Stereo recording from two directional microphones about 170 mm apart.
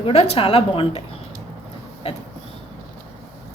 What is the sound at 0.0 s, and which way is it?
A woman's voice, 35° left (ahead or behind).